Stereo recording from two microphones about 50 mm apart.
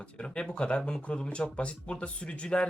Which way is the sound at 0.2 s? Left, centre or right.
Centre.